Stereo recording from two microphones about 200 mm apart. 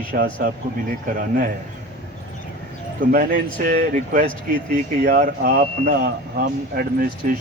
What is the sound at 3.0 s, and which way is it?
Speech, 45° right (ahead or behind).